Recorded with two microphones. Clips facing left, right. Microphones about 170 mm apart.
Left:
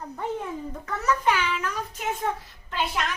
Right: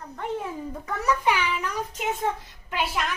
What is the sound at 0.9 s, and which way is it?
A child's voice, 15° right (ahead or behind).